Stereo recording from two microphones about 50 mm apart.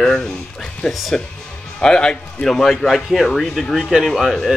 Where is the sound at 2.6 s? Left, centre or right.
Centre.